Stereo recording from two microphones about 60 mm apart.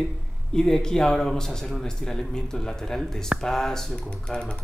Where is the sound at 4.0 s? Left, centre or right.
Centre.